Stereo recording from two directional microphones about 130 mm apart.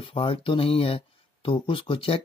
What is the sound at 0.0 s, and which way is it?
Speech, 45° left (ahead or behind).